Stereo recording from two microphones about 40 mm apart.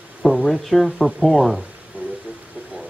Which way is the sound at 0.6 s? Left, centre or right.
Centre.